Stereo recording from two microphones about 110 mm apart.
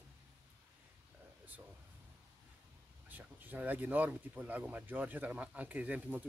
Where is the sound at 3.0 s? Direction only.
15° right (ahead or behind).